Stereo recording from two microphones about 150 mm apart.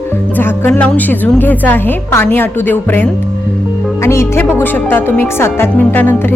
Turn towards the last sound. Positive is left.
turn(degrees=15)  # may be behind; listen again after turning